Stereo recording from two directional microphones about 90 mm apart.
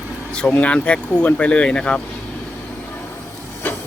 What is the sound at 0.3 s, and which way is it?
Speech, 15° left (ahead or behind).